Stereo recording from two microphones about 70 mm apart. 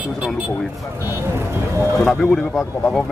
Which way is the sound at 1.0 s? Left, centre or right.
Right.